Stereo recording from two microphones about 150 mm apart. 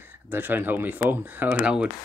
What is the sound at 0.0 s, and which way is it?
Speech, 15° right (ahead or behind).